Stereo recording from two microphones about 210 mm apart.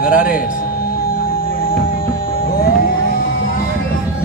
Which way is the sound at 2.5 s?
45° left (ahead or behind).